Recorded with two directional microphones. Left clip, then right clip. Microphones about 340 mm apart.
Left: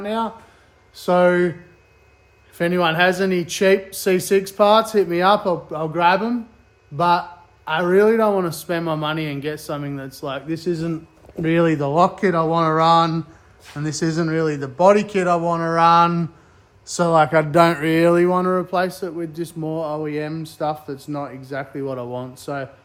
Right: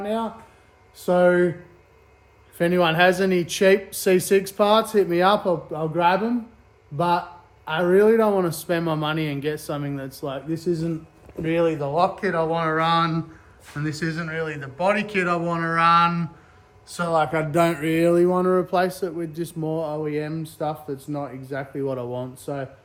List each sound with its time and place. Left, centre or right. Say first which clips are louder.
0.0 s a man's voice: left 3 dB; centre
2.6 s a man's voice: left 1 dB; centre
11.4 s speech: left 4 dB; left
18.1 s a man's voice: left 2 dB; centre